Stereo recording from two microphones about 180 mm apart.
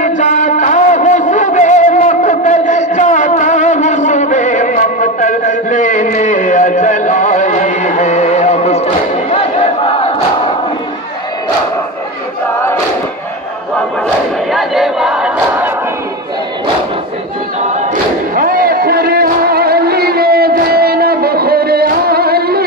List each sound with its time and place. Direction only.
0.0 s music: 45° left (ahead or behind)
14.5 s battle cry: centre (ahead or behind)
18.3 s a sound: 50° right (ahead or behind)